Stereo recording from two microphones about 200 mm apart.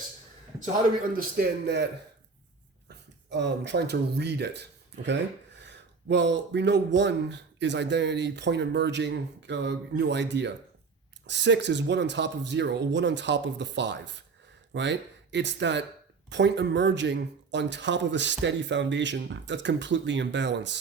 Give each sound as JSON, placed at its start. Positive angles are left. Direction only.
{"t": 1.1, "sound": "a man's voice", "side_deg": -45}
{"t": 3.2, "sound": "speech", "side_deg": -60}